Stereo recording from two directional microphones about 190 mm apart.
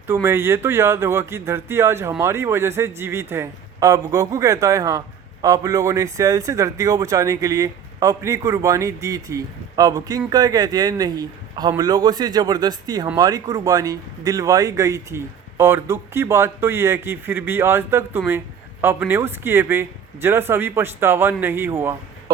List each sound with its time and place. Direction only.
0.1 s speech: 15° right (ahead or behind)